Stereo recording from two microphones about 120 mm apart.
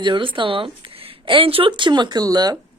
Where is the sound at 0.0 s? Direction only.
45° right (ahead or behind).